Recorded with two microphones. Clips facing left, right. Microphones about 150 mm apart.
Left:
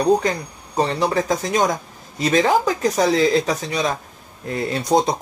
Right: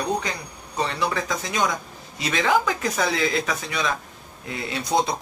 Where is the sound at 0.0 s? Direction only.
40° left (ahead or behind).